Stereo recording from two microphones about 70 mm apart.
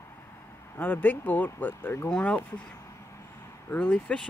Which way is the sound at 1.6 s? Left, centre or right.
Left.